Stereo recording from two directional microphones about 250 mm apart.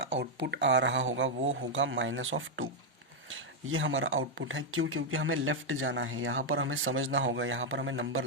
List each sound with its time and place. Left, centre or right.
0.2 s speech: right